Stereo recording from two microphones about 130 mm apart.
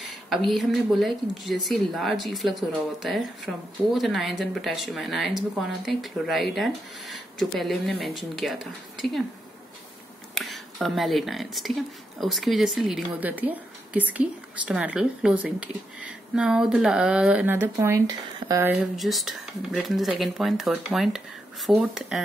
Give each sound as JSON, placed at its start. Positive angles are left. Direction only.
{"t": 0.0, "sound": "speech", "side_deg": 0}
{"t": 10.3, "sound": "a woman's voice", "side_deg": 0}
{"t": 17.7, "sound": "speech", "side_deg": -25}
{"t": 18.7, "sound": "speech", "side_deg": 0}